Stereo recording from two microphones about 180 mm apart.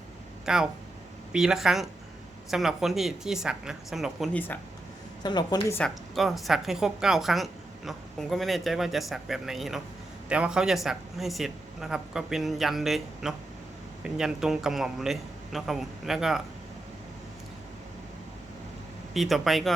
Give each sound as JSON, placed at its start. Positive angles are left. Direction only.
{"t": 0.4, "sound": "a woman's voice", "side_deg": -5}
{"t": 4.4, "sound": "speech", "side_deg": 10}
{"t": 5.2, "sound": "a woman's voice", "side_deg": 25}
{"t": 5.7, "sound": "a woman's voice", "side_deg": 0}
{"t": 19.1, "sound": "a woman's voice", "side_deg": 0}